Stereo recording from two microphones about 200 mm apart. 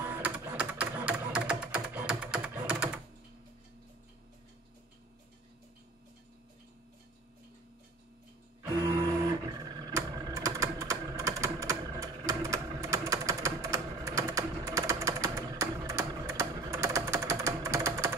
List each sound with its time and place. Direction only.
0.0 s typing: 10° right (ahead or behind)
9.8 s typing: 20° right (ahead or behind)